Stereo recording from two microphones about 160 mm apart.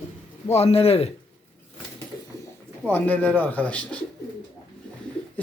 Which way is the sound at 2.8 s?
10° left (ahead or behind).